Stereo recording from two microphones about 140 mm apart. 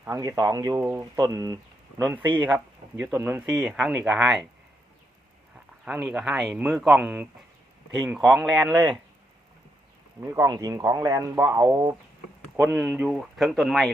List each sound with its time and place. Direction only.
0.0 s speech: 20° right (ahead or behind)
0.8 s speech: 15° right (ahead or behind)
1.2 s speech: 25° right (ahead or behind)
2.4 s speech: 15° right (ahead or behind)
5.8 s speech: 10° right (ahead or behind)
8.2 s speech: centre (ahead or behind)
10.2 s speech: 20° right (ahead or behind)
12.7 s speech: 10° right (ahead or behind)